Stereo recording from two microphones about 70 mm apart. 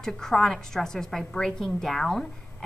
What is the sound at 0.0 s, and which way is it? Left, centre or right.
A woman's voice, centre.